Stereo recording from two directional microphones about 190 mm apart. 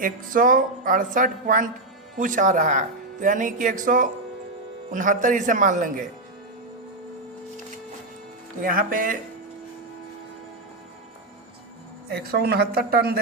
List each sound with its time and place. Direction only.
0.0 s speech: 45° right (ahead or behind)
8.6 s speech: 45° right (ahead or behind)
12.0 s a woman's voice: 55° right (ahead or behind)